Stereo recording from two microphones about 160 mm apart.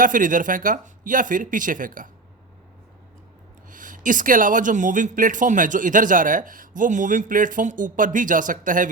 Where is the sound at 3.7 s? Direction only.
55° right (ahead or behind).